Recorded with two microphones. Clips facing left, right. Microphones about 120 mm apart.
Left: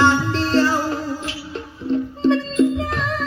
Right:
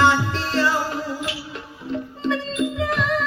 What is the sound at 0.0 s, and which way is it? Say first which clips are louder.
Music: left 2 dB; 30° left (ahead or behind).